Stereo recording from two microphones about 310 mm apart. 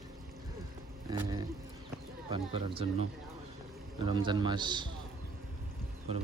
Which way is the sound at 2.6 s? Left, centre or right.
Centre.